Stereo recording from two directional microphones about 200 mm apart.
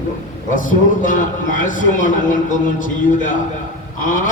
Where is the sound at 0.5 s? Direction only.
40° left (ahead or behind).